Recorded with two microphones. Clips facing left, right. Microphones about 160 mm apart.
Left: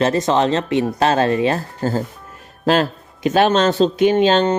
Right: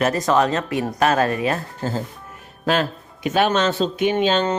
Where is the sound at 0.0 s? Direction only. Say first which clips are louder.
Left 2 dB; 25° left (ahead or behind).